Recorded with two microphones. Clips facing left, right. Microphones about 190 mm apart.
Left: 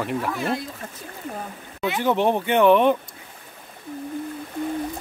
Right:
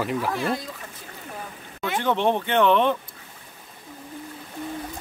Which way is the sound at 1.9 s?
10° left (ahead or behind).